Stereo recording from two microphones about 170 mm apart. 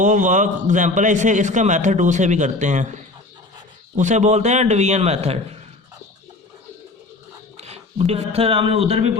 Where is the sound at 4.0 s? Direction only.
45° right (ahead or behind).